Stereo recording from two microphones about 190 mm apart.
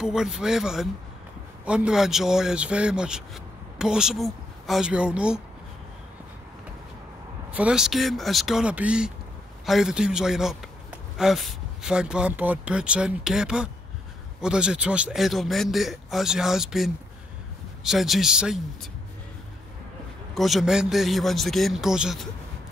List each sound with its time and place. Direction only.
0.0 s a man's voice: 5° right (ahead or behind)
7.5 s a man's voice: 5° right (ahead or behind)
20.3 s a man's voice: centre (ahead or behind)